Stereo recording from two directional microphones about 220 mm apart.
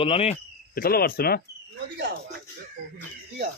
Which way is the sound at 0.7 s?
45° left (ahead or behind).